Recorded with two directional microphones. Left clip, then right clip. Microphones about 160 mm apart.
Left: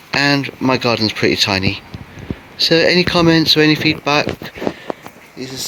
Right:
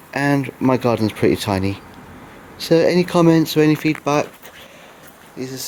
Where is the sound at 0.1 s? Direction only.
20° right (ahead or behind).